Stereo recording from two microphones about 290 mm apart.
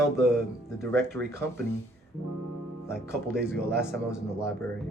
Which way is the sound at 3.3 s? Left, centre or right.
Right.